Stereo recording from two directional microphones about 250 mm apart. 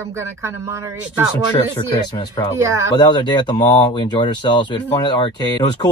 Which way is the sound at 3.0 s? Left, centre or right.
Centre.